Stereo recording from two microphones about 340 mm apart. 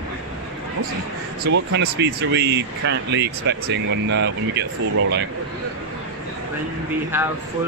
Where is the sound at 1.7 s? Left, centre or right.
Right.